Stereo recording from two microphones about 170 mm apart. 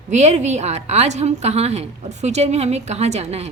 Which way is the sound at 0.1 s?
45° right (ahead or behind).